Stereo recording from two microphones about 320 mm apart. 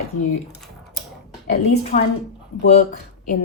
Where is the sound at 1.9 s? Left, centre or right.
Left.